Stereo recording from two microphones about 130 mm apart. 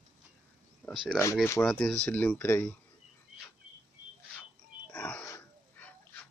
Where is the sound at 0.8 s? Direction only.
15° left (ahead or behind).